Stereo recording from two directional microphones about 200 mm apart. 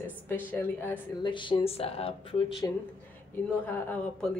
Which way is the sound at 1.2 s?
25° left (ahead or behind).